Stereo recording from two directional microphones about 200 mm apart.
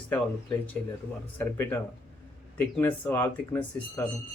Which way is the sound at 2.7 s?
10° left (ahead or behind).